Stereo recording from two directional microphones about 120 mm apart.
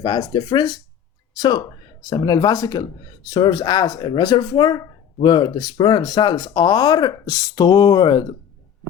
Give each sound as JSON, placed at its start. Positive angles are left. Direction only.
{"t": 0.0, "sound": "speech", "side_deg": 35}